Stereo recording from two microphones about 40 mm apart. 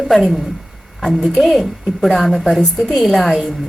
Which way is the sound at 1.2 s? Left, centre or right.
Centre.